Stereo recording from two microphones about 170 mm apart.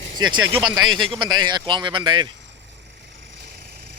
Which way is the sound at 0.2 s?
25° right (ahead or behind).